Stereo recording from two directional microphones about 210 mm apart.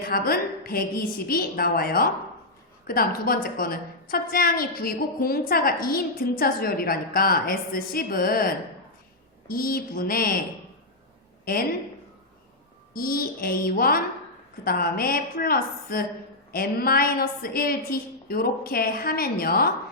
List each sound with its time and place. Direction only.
0.0 s a woman's voice: 45° left (ahead or behind)
11.4 s speech: 45° left (ahead or behind)
12.9 s a woman's voice: 45° left (ahead or behind)